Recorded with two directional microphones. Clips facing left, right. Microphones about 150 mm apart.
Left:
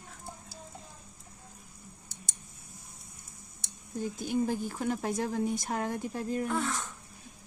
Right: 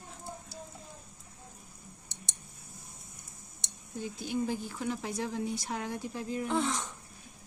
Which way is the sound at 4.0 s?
45° left (ahead or behind).